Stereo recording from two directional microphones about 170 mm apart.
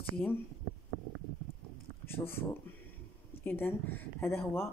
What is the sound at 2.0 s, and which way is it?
Speech, 15° left (ahead or behind).